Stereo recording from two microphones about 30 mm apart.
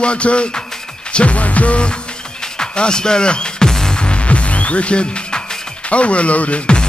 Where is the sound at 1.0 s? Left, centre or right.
Left.